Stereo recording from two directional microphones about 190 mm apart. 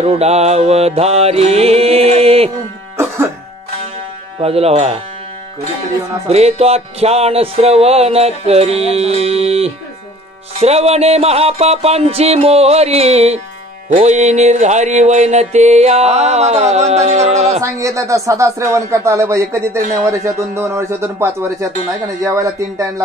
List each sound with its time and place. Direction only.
0.0 s music: 35° right (ahead or behind)
4.4 s music: 30° right (ahead or behind)
6.2 s music: 35° right (ahead or behind)
17.6 s speech: 15° right (ahead or behind)